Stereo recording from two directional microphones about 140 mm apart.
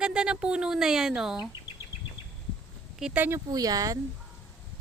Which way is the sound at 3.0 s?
10° right (ahead or behind).